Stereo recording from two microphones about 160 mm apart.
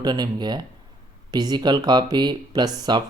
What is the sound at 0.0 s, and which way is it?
Speech, 25° right (ahead or behind).